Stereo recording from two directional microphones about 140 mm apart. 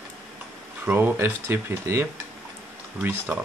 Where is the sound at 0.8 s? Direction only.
15° right (ahead or behind).